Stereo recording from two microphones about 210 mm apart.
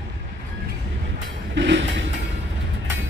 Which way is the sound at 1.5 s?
60° right (ahead or behind).